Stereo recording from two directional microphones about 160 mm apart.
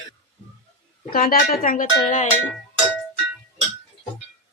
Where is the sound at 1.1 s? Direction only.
65° left (ahead or behind).